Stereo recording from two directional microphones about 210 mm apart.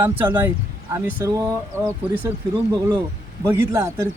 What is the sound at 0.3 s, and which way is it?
Speech, 10° right (ahead or behind).